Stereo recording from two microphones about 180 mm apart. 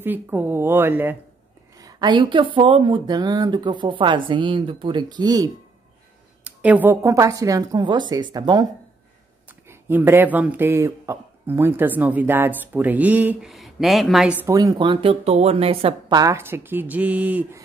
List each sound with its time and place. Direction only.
0.0 s speech: 10° right (ahead or behind)
1.8 s speech: 20° right (ahead or behind)
6.4 s speech: 10° right (ahead or behind); by 8.6 s 25° right (ahead or behind)
9.5 s speech: 10° right (ahead or behind)
14.4 s speech: 20° right (ahead or behind)
16.2 s speech: 15° right (ahead or behind)